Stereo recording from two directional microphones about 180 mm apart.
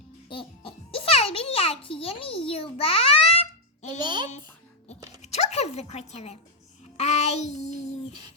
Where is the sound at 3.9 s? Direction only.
25° right (ahead or behind).